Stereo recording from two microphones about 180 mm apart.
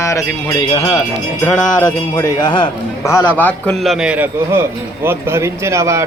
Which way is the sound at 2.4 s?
25° left (ahead or behind).